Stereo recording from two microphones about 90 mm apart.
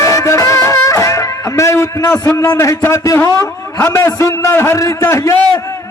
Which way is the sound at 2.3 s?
35° left (ahead or behind).